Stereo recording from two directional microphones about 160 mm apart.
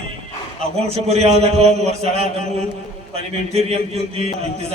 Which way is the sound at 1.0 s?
40° right (ahead or behind).